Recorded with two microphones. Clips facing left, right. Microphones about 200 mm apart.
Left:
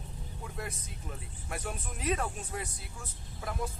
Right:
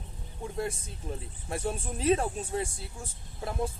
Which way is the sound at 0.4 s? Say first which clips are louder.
Right 8 dB; 30° right (ahead or behind).